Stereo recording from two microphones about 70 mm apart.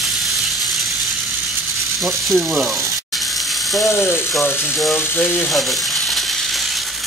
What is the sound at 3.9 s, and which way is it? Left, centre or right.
Speech, left.